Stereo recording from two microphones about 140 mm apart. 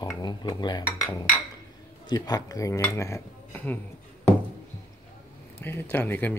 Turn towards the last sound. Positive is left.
turn(degrees=15)  # may be behind; listen again after turning